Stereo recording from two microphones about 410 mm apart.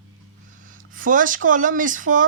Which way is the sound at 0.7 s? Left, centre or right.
Centre.